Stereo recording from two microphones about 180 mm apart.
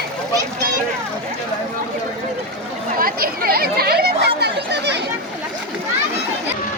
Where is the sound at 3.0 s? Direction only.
55° right (ahead or behind).